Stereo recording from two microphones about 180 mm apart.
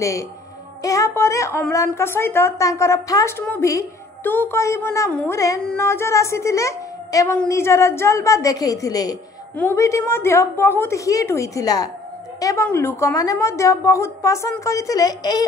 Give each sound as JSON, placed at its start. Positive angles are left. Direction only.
{"t": 0.8, "sound": "a woman's voice", "side_deg": 15}